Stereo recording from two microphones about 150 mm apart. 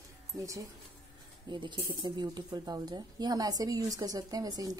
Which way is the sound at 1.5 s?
30° right (ahead or behind).